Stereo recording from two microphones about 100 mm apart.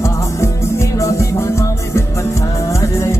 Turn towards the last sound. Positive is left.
turn(degrees=30)  # may be behind; listen again after turning